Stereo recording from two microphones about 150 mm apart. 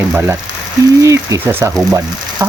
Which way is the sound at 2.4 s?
20° right (ahead or behind).